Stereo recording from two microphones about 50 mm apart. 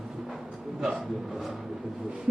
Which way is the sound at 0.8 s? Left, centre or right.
Centre.